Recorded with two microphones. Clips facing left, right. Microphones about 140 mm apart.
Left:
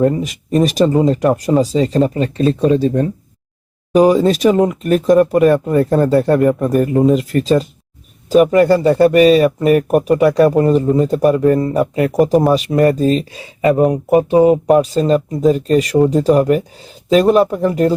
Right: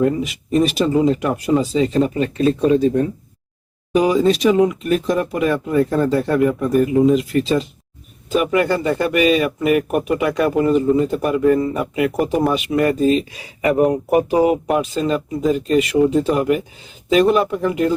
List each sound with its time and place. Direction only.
0.0 s speech: 40° left (ahead or behind)
3.9 s speech: 45° left (ahead or behind)